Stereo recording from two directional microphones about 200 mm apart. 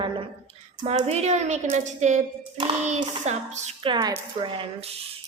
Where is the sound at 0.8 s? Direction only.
30° right (ahead or behind).